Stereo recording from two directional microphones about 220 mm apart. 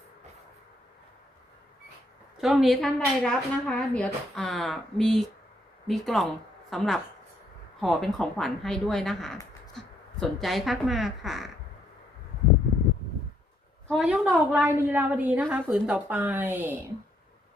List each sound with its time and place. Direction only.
2.4 s a woman's voice: centre (ahead or behind)
13.8 s a woman's voice: centre (ahead or behind)